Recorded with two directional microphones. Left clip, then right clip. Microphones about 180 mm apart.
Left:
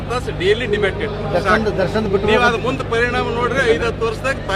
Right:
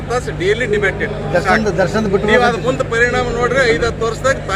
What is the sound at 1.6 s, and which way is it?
Speech, 35° right (ahead or behind).